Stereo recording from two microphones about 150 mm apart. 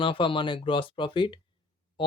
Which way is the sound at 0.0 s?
35° left (ahead or behind).